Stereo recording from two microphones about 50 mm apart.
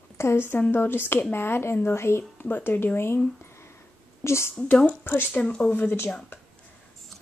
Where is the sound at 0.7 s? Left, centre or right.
Left.